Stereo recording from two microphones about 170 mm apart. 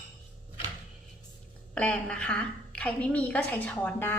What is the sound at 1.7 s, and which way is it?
A woman's voice, 5° left (ahead or behind).